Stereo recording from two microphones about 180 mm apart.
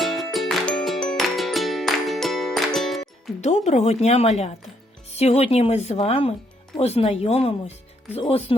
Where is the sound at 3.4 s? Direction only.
40° left (ahead or behind).